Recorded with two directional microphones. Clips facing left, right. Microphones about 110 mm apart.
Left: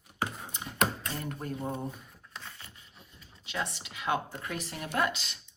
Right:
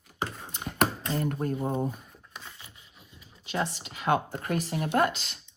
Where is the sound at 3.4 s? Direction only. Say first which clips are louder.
Right 5 dB; 35° right (ahead or behind).